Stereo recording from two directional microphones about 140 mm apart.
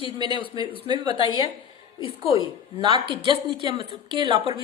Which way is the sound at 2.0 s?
20° right (ahead or behind).